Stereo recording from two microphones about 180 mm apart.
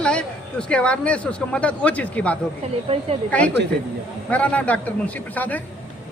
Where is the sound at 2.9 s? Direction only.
35° right (ahead or behind).